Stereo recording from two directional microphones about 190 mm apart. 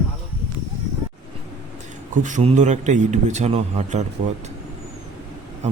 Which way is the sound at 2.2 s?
40° right (ahead or behind).